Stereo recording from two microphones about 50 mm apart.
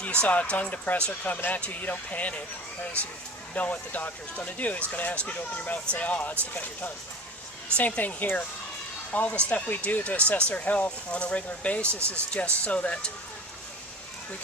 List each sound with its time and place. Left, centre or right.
0.0 s speech: left
3.5 s speech: left
11.9 s speech: right
12.3 s speech: left